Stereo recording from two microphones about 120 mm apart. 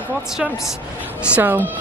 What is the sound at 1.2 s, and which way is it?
Speech, 15° right (ahead or behind).